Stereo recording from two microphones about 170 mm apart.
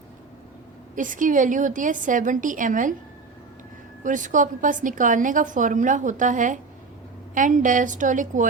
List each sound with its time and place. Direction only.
0.9 s a woman's voice: 50° right (ahead or behind)
4.0 s a woman's voice: 50° right (ahead or behind)